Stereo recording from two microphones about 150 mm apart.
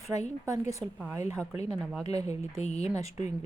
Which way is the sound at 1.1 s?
20° right (ahead or behind).